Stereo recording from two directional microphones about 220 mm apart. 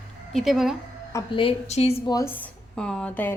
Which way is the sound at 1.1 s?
25° left (ahead or behind).